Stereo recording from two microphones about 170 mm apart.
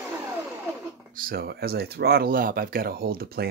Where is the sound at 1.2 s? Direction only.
60° right (ahead or behind).